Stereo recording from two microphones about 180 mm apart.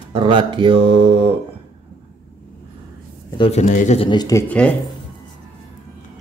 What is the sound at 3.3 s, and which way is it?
Speech, 35° left (ahead or behind).